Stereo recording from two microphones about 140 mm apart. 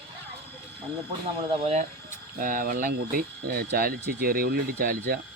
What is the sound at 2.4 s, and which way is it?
Speech, 80° right.